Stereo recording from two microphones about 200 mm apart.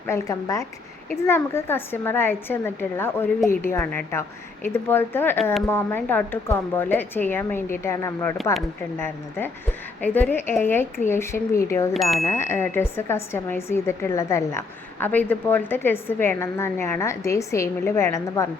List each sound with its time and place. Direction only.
0.1 s speech: 15° left (ahead or behind)